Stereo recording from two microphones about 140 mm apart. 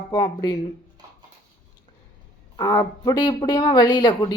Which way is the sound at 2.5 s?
30° left (ahead or behind).